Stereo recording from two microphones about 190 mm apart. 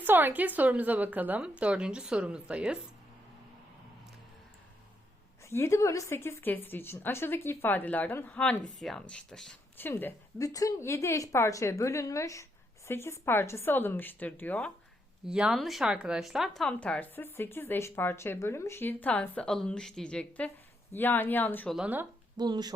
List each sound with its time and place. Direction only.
0.0 s speech: 10° right (ahead or behind)
5.4 s a woman's voice: 15° left (ahead or behind)
15.3 s a woman's voice: 5° right (ahead or behind)
21.8 s speech: 10° right (ahead or behind)
22.4 s speech: 20° right (ahead or behind)